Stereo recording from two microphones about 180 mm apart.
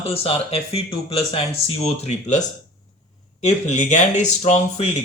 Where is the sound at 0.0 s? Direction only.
30° left (ahead or behind).